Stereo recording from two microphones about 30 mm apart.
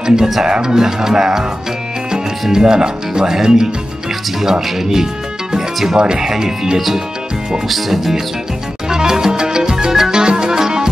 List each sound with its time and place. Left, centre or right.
0.0 s speech: right
2.5 s speech: right
5.9 s speech: right
6.2 s speech: centre
7.6 s speech: centre
8.8 s music: centre
10.1 s music: right